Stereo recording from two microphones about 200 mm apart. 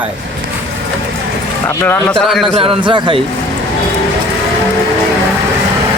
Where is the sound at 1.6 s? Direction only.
10° left (ahead or behind).